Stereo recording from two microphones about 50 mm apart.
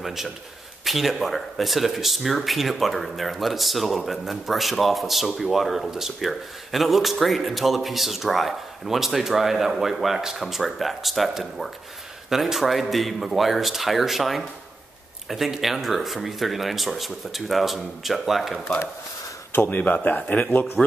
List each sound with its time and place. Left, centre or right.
0.0 s a man's voice: centre
19.5 s speech: left